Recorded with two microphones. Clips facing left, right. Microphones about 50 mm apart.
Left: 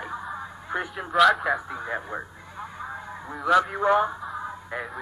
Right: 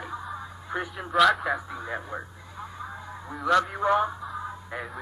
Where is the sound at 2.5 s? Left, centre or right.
Left.